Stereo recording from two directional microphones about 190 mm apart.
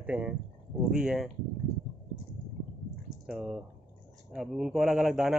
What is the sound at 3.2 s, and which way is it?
Speech, centre (ahead or behind).